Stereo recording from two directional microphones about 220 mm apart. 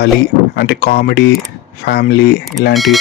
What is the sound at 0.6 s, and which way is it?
Speech, 45° left (ahead or behind).